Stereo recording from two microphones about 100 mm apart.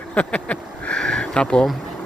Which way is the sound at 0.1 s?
10° left (ahead or behind).